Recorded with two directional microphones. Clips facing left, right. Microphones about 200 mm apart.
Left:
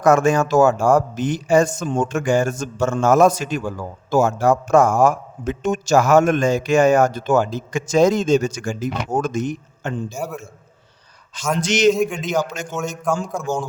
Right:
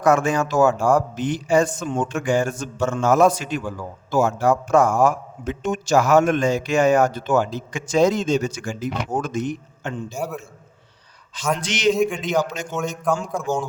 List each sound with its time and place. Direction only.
0.0 s a man's voice: 45° left (ahead or behind)
10.2 s a man's voice: centre (ahead or behind)
11.6 s a man's voice: 45° left (ahead or behind)
11.9 s a man's voice: centre (ahead or behind)